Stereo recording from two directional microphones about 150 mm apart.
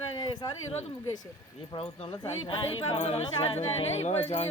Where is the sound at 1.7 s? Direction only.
40° left (ahead or behind).